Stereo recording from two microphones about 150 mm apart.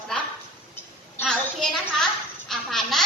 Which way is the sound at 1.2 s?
Centre (ahead or behind).